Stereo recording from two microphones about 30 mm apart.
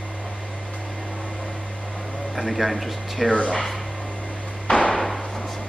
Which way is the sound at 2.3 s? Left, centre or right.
Centre.